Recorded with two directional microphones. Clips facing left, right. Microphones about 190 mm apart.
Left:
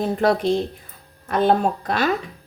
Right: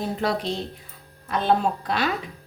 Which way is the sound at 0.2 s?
50° left (ahead or behind).